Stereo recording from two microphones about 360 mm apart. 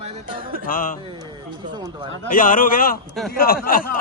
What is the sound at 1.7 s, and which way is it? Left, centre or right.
Speech, centre.